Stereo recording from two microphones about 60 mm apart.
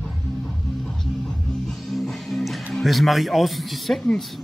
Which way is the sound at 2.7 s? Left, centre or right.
Centre.